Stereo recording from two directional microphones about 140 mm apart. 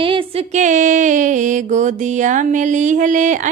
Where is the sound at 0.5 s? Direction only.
60° right (ahead or behind).